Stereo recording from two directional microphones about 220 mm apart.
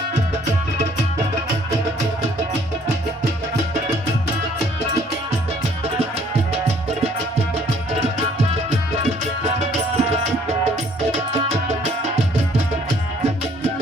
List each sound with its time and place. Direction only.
9.6 s music: 30° right (ahead or behind)
11.3 s music: 30° right (ahead or behind)